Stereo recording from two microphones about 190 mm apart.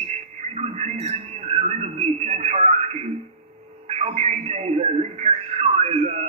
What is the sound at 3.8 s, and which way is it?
Radio, 35° right (ahead or behind).